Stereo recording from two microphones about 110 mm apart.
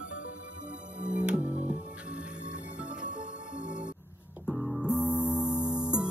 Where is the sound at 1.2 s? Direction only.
10° right (ahead or behind).